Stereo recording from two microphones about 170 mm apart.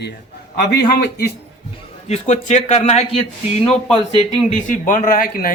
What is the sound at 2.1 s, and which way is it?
Speech, 40° left (ahead or behind).